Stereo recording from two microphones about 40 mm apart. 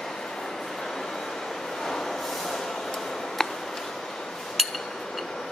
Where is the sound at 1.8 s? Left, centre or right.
Centre.